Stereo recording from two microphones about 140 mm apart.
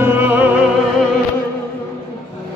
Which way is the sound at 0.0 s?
15° right (ahead or behind).